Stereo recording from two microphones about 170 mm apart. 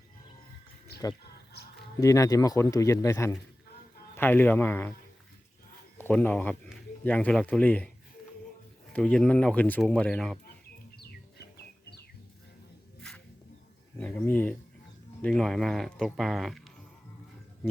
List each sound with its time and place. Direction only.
2.0 s speech: 20° left (ahead or behind)
6.0 s speech: 10° left (ahead or behind)
8.9 s speech: 5° left (ahead or behind)
11.5 s music: 75° left (ahead or behind)
13.0 s music: 5° left (ahead or behind)
14.0 s speech: 10° left (ahead or behind)